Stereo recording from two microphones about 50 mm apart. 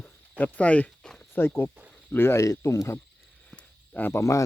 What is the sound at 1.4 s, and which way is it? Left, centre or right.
Speech, left.